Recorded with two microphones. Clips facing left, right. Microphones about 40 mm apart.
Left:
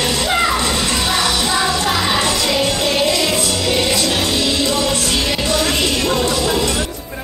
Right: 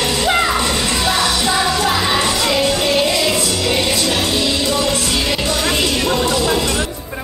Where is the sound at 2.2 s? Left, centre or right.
Centre.